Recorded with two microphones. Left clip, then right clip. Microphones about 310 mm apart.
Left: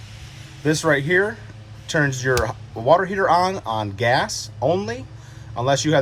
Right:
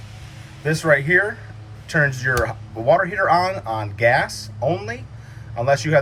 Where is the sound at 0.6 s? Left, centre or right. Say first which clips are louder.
Right 1 dB; centre.